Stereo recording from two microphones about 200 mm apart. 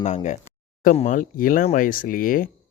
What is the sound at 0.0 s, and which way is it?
Speech, 35° left (ahead or behind).